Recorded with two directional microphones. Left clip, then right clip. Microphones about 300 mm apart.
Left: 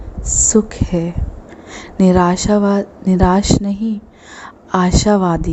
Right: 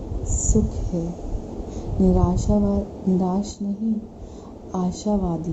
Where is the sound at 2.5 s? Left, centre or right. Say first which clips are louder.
Left 9 dB; left.